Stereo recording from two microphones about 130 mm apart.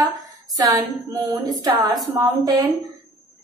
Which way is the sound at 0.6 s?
30° right (ahead or behind).